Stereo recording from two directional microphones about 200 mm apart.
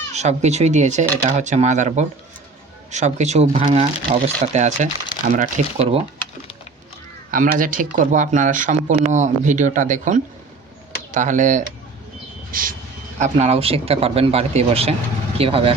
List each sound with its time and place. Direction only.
0.1 s speech: 35° right (ahead or behind)
7.3 s speech: 45° right (ahead or behind)
12.5 s mouse: 45° right (ahead or behind)
13.1 s speech: 35° right (ahead or behind)